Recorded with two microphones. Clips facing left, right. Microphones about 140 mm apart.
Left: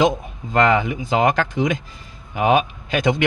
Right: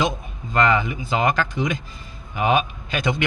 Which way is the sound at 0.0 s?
90° left.